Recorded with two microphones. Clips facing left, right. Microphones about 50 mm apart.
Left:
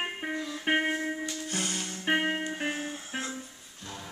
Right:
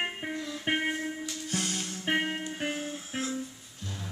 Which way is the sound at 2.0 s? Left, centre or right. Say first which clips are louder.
Left 2 dB; centre.